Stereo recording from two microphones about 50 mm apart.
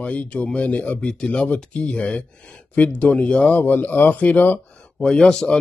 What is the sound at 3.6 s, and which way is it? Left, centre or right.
Speech, left.